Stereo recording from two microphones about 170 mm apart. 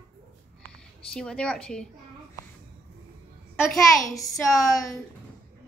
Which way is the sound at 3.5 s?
Centre (ahead or behind).